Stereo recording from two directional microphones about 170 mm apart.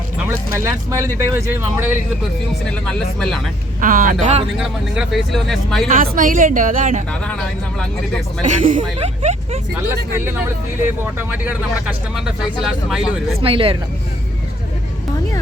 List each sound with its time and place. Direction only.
0.3 s speech: 15° right (ahead or behind)
2.6 s speech: 5° left (ahead or behind)
3.8 s a woman's voice: 50° right (ahead or behind)
4.5 s speech: centre (ahead or behind)
5.9 s a woman's voice: 55° right (ahead or behind)
7.1 s speech: 5° left (ahead or behind)
8.4 s a woman's voice: 45° right (ahead or behind)
8.8 s speech: 35° right (ahead or behind)
11.0 s speech: 10° right (ahead or behind)
13.4 s speech: 30° right (ahead or behind)